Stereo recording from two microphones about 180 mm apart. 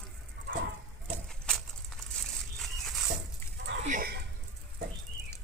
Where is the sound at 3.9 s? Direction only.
55° right (ahead or behind).